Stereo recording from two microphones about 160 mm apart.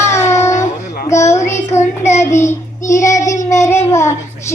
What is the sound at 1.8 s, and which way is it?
Child singing, 45° left (ahead or behind).